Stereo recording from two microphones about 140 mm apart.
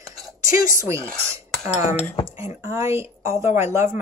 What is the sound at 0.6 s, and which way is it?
Speech, 20° right (ahead or behind).